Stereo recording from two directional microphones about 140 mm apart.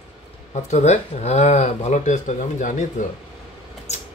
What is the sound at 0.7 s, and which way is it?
Speech, 55° left (ahead or behind).